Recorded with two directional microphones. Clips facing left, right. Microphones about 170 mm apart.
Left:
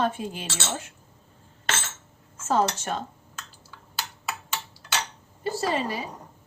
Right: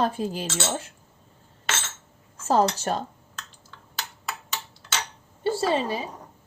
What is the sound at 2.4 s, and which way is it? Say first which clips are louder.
Speech: right 3 dB; 35° right (ahead or behind).